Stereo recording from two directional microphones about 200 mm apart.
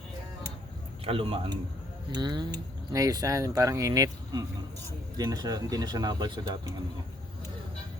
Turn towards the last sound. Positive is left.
turn(degrees=-20)  # may be behind; listen again after turning